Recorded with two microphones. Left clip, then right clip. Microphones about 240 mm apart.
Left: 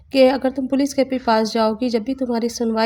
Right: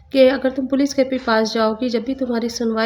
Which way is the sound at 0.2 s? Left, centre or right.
Left.